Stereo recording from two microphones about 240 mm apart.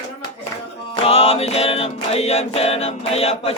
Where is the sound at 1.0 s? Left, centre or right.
Left.